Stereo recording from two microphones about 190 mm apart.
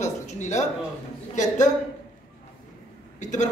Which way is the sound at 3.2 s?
40° left (ahead or behind).